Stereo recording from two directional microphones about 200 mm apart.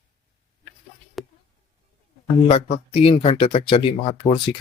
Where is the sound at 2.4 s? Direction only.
30° left (ahead or behind).